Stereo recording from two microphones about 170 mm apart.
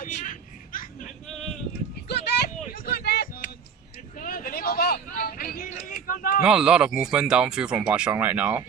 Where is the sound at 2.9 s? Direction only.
70° left (ahead or behind).